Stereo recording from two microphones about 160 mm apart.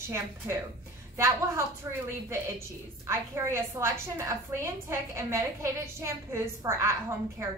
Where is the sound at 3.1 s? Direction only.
15° right (ahead or behind).